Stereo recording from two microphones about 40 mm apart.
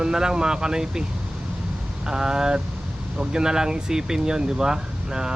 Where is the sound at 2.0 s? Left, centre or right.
Centre.